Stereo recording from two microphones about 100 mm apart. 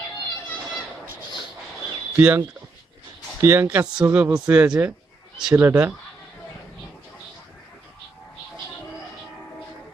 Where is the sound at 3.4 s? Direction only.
25° right (ahead or behind).